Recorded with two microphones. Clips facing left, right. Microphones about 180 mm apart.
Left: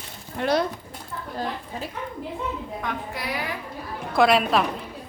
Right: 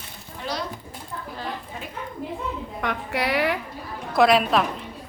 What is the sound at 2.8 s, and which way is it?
Speech, 70° right (ahead or behind).